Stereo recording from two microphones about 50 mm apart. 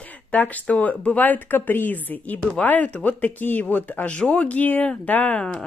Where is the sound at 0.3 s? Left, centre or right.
Left.